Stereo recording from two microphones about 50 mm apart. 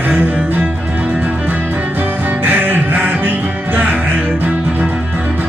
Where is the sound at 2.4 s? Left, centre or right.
Right.